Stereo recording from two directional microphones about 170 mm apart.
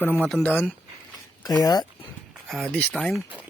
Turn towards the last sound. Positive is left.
turn(degrees=0)  # may be behind; listen again after turning